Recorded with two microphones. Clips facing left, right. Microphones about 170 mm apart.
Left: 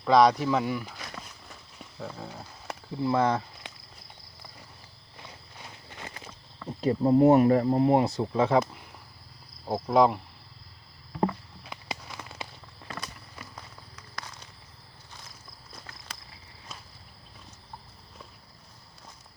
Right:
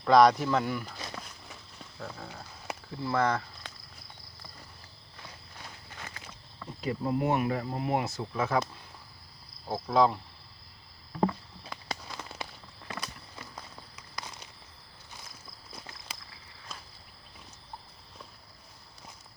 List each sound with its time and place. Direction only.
0.0 s speech: centre (ahead or behind)
1.2 s walk: 5° left (ahead or behind)
2.9 s speech: 15° left (ahead or behind)
5.9 s walk: 25° left (ahead or behind)
6.8 s speech: 35° left (ahead or behind); by 10.2 s 15° left (ahead or behind)
11.7 s a sound: 10° left (ahead or behind)
13.6 s a sound: 15° right (ahead or behind)